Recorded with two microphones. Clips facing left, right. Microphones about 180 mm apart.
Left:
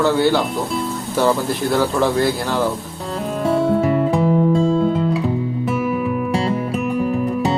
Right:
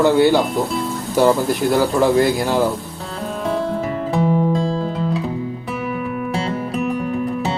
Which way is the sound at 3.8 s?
Centre (ahead or behind).